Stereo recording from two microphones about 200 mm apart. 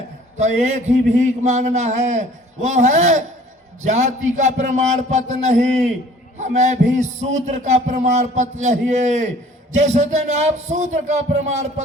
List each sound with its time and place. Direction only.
0.3 s a man's voice: 35° right (ahead or behind)